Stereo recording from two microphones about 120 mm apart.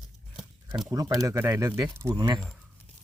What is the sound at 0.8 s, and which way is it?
Speech, 25° right (ahead or behind).